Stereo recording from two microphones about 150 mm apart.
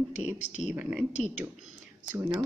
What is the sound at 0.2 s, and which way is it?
Speech, 50° left (ahead or behind).